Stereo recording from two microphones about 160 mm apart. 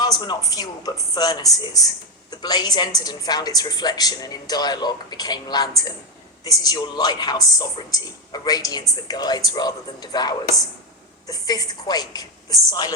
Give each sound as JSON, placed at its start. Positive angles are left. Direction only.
{"t": 0.0, "sound": "a woman's voice", "side_deg": 25}